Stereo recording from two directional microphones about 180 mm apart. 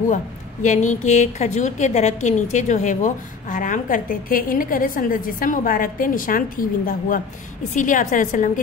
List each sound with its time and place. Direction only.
0.1 s speech: 45° left (ahead or behind)